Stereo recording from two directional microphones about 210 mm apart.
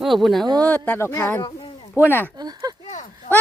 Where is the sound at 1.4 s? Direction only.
25° left (ahead or behind).